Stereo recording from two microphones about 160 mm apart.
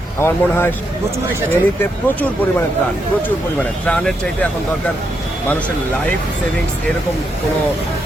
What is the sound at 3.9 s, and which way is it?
Speech, 5° left (ahead or behind).